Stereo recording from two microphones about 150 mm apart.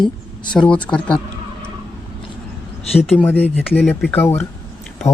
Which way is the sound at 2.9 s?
5° left (ahead or behind).